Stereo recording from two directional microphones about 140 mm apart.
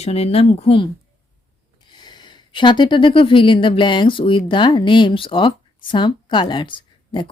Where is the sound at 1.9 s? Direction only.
30° left (ahead or behind).